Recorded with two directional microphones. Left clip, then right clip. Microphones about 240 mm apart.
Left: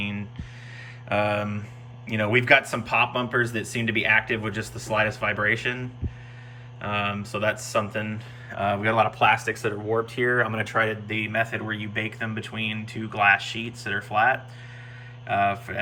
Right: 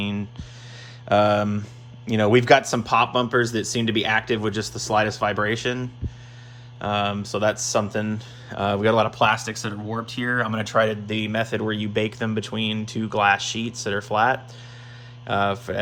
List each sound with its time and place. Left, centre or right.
1.1 s speech: centre